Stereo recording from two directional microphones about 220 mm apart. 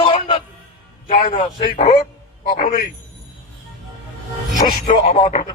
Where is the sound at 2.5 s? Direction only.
40° left (ahead or behind).